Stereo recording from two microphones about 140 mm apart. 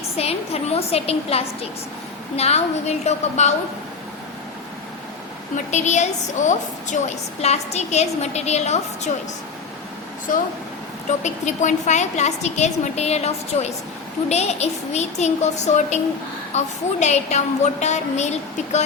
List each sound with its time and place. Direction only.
0.2 s a woman's voice: 45° left (ahead or behind)
5.7 s a woman's voice: 55° left (ahead or behind)
10.3 s speech: 70° left (ahead or behind)
11.2 s a woman's voice: 55° left (ahead or behind)